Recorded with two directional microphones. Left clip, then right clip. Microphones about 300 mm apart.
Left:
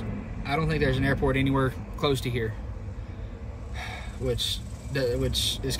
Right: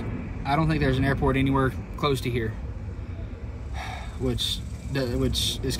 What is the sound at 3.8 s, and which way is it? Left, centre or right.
A man's voice, centre.